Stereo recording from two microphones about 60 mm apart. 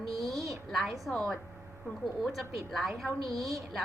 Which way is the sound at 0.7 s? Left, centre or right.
Centre.